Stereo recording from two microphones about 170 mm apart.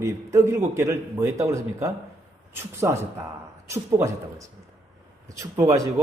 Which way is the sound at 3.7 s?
15° right (ahead or behind).